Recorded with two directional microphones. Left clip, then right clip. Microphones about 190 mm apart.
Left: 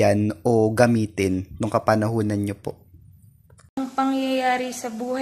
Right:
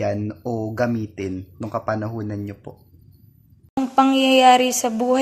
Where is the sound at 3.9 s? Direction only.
30° right (ahead or behind).